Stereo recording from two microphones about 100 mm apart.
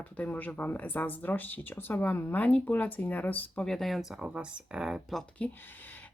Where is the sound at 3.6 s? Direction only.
5° left (ahead or behind).